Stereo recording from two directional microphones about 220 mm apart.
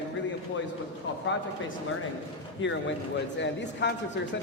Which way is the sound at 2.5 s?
55° left (ahead or behind).